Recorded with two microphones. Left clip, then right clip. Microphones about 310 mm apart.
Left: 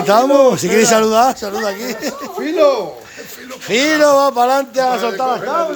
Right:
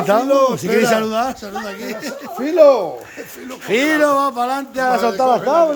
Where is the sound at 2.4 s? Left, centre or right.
Right.